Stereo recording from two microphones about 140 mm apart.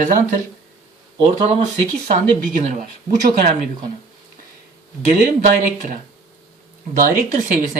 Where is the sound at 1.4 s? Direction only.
55° right (ahead or behind).